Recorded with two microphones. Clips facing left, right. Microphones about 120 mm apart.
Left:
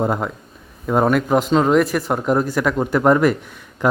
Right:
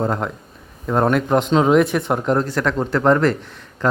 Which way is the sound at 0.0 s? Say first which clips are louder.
Left 1 dB; 10° left (ahead or behind).